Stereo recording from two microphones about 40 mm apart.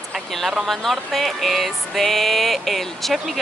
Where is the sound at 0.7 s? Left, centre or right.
Centre.